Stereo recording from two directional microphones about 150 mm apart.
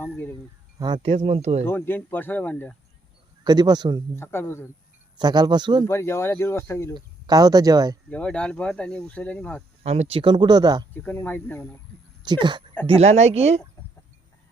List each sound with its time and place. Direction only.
0.0 s speech: 15° left (ahead or behind)
1.0 s speech: 40° right (ahead or behind)
1.6 s speech: 15° left (ahead or behind)
3.4 s speech: 25° right (ahead or behind)
4.1 s speech: 15° left (ahead or behind)
5.1 s speech: 30° right (ahead or behind)
5.9 s speech: 15° left (ahead or behind)
6.9 s speech: 25° right (ahead or behind)
8.1 s speech: 5° left (ahead or behind)
9.8 s speech: 45° right (ahead or behind); by 10.8 s 25° right (ahead or behind)
10.9 s speech: 10° left (ahead or behind)
12.2 s speech: 30° right (ahead or behind)
12.9 s speech: 45° right (ahead or behind)